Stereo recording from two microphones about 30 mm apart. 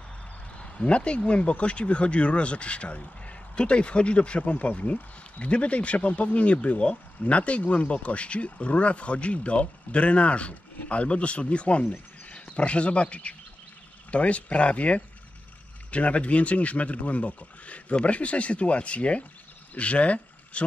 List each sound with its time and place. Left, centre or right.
0.6 s speech: left